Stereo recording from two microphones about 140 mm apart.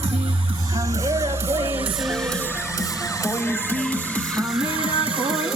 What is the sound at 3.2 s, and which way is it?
Music, 15° left (ahead or behind).